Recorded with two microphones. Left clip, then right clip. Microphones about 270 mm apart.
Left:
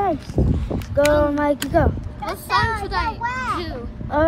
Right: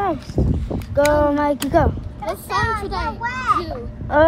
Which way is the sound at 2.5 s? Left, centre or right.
Centre.